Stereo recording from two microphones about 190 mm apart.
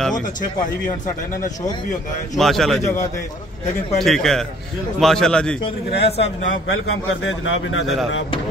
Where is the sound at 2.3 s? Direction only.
Centre (ahead or behind).